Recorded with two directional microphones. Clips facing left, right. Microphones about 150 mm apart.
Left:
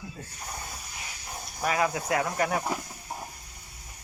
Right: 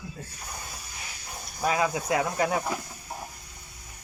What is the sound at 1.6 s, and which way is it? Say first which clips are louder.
Speech: right 1 dB; 20° right (ahead or behind).